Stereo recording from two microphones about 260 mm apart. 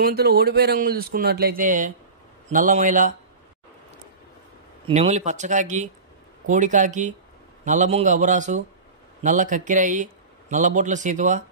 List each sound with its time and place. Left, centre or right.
0.0 s speech: right
4.8 s speech: right